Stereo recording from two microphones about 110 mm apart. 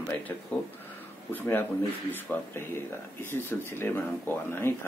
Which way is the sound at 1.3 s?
15° left (ahead or behind).